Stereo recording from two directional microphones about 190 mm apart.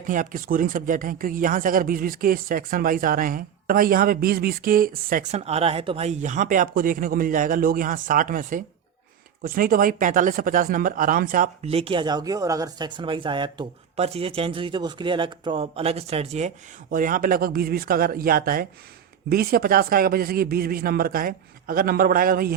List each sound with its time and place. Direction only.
0.1 s speech: 45° right (ahead or behind)
5.5 s speech: 30° right (ahead or behind); by 11.5 s 45° right (ahead or behind)
11.6 s speech: 30° right (ahead or behind)
16.9 s speech: 45° right (ahead or behind)